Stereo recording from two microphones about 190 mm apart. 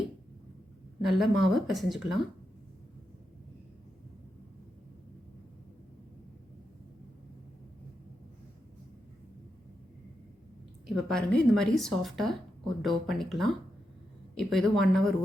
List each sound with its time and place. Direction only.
1.0 s a woman's voice: centre (ahead or behind)
10.8 s a woman's voice: centre (ahead or behind)